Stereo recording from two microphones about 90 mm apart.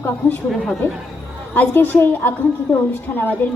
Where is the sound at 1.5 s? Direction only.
20° left (ahead or behind).